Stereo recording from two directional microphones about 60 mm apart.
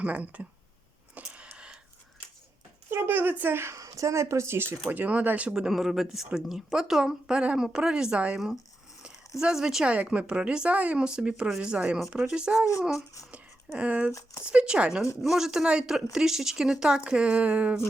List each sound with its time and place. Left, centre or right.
0.0 s speech: right
1.2 s a sound: centre
2.9 s speech: right
3.8 s speech: right
4.9 s speech: right
5.5 s speech: centre
8.4 s speech: centre
9.9 s speech: right
13.7 s speech: right
14.1 s speech: left
14.4 s speech: centre
15.2 s speech: centre; by 17.7 s right